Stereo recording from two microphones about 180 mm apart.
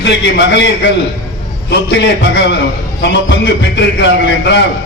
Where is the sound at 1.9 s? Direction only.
75° left (ahead or behind).